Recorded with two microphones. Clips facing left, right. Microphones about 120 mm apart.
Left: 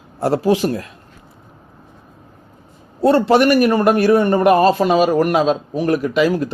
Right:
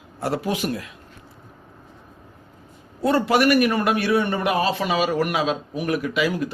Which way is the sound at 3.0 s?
30° left (ahead or behind).